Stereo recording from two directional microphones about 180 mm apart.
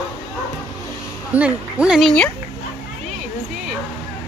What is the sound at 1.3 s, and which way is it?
Speech, 5° right (ahead or behind).